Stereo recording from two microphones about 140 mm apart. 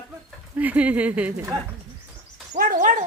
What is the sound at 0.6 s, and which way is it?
Speech, 10° right (ahead or behind).